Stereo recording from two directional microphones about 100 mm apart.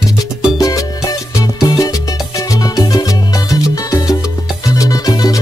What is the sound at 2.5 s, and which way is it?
Salsa music, 40° left (ahead or behind).